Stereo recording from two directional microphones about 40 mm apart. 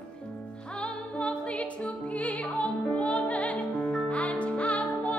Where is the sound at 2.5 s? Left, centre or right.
Left.